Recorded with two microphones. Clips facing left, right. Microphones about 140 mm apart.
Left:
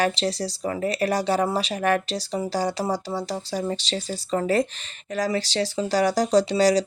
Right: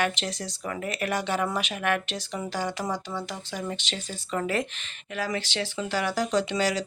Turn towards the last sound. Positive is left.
turn(degrees=35)  # may be behind; listen again after turning